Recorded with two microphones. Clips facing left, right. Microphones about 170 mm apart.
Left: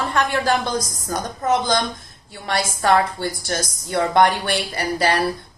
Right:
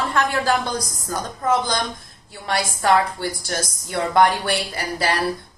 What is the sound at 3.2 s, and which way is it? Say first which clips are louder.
A woman's voice: left 1 dB; 20° left (ahead or behind).